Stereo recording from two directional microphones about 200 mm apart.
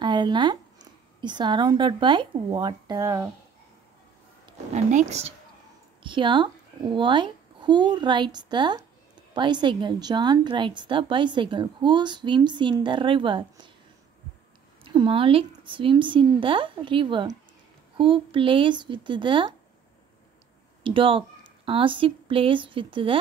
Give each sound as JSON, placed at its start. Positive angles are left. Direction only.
{"t": 0.0, "sound": "speech", "side_deg": -20}
{"t": 4.5, "sound": "a child's voice", "side_deg": -35}
{"t": 14.8, "sound": "a woman's voice", "side_deg": -25}
{"t": 20.8, "sound": "a woman's voice", "side_deg": -25}